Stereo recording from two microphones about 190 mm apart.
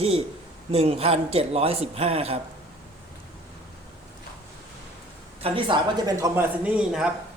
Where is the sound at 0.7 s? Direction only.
30° right (ahead or behind).